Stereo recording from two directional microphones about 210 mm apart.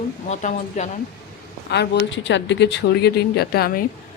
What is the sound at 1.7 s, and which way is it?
Speech, 60° left (ahead or behind).